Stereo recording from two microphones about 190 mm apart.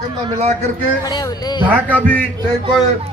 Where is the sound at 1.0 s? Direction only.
20° left (ahead or behind).